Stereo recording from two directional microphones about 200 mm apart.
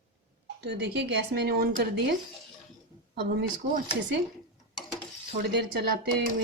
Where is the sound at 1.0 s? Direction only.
55° right (ahead or behind).